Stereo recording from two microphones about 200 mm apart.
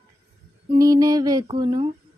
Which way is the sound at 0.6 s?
20° right (ahead or behind).